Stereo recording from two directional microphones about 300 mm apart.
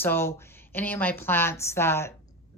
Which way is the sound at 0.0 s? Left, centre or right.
Centre.